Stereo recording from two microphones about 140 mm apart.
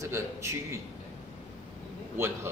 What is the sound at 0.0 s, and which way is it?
Speech, 20° right (ahead or behind).